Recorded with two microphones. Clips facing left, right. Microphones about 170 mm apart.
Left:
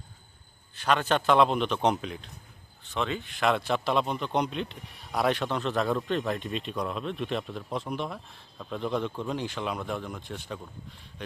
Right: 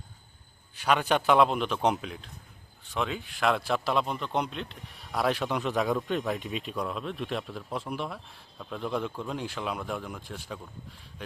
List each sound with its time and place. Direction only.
0.8 s a man's voice: 10° right (ahead or behind)